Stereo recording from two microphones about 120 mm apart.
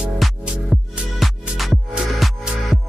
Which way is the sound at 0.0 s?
5° right (ahead or behind).